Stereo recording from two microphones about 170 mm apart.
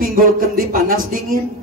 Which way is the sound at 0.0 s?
60° right (ahead or behind).